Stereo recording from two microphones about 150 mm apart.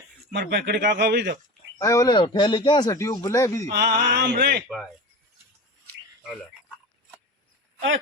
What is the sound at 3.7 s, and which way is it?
Speech, 90° right.